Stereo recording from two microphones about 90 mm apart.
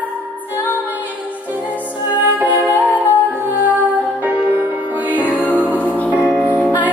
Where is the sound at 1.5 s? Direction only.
15° right (ahead or behind).